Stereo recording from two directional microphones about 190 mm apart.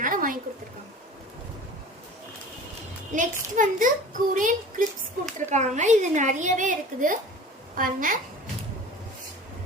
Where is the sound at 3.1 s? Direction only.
40° right (ahead or behind).